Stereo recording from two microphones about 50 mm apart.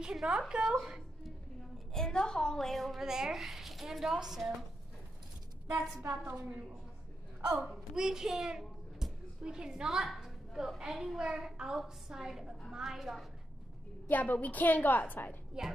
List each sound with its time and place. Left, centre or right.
0.1 s a woman's voice: centre
2.0 s a woman's voice: centre
3.0 s a woman's voice: centre
6.2 s a woman's voice: right
7.6 s a woman's voice: centre
9.8 s a woman's voice: centre
14.0 s a woman's voice: left
15.6 s a woman's voice: centre